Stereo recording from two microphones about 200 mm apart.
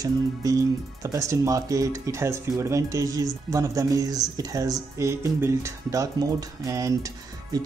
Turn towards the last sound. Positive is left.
turn(degrees=-15)  # may be behind; listen again after turning